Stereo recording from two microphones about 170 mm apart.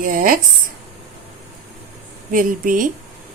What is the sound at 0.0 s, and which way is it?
Speech, 55° right (ahead or behind).